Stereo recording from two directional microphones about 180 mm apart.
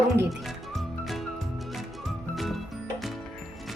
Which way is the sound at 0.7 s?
Centre (ahead or behind).